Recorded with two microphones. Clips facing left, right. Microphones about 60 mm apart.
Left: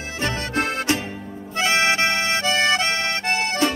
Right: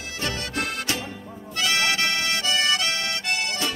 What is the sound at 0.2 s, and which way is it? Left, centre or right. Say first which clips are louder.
Music: left 5 dB; left.